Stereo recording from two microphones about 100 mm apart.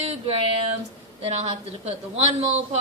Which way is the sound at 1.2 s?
90° right.